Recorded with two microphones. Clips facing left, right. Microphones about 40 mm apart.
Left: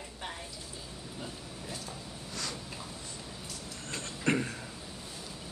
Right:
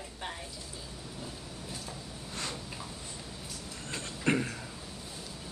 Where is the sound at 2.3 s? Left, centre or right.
Right.